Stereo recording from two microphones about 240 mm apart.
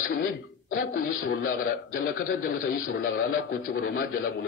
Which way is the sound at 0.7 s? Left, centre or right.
Left.